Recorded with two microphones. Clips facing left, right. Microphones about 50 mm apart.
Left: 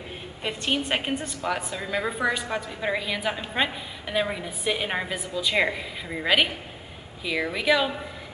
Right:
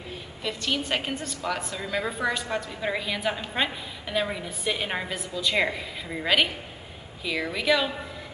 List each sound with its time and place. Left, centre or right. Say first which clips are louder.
0.4 s a woman's voice: left 2 dB; left; by 7.9 s centre